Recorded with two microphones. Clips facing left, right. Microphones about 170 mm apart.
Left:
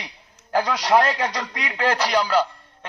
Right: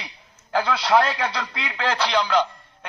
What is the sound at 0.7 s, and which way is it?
A man's voice, 15° left (ahead or behind).